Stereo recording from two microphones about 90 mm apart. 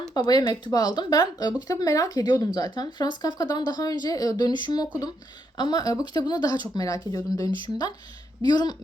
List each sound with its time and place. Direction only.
0.0 s speech: 50° left (ahead or behind)
1.7 s speech: 40° left (ahead or behind)